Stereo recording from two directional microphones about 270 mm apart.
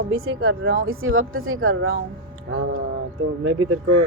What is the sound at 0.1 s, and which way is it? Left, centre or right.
Speech, right.